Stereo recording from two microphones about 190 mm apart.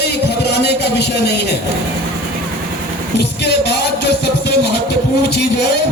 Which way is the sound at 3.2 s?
60° left (ahead or behind).